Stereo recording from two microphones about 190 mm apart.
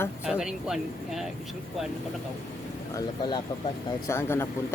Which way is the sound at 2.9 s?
25° left (ahead or behind).